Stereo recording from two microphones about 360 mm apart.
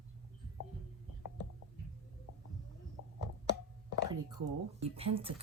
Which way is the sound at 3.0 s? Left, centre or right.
Left.